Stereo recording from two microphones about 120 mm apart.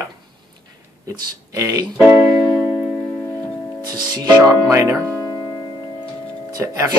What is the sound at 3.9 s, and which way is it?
Speech, 35° right (ahead or behind).